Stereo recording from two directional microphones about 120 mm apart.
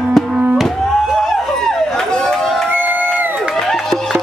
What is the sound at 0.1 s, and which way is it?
Music, 5° right (ahead or behind).